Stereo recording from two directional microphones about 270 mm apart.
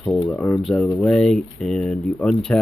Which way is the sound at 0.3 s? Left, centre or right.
Centre.